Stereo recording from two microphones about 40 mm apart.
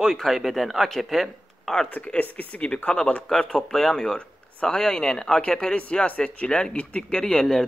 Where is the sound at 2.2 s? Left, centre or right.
Left.